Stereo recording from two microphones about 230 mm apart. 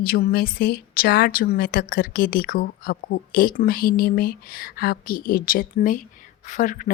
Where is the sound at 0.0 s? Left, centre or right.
Left.